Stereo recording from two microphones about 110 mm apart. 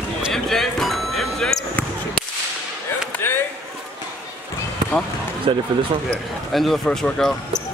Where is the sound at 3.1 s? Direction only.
20° left (ahead or behind).